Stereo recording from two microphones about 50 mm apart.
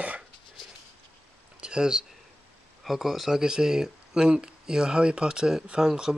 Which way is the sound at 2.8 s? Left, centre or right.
Centre.